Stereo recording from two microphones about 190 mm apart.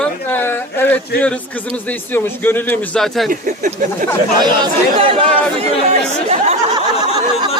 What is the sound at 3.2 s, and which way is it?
Speech, 45° right (ahead or behind).